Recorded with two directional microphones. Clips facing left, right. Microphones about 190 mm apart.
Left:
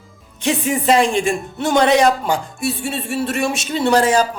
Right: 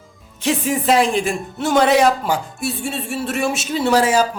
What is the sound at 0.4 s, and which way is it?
Speech, centre (ahead or behind).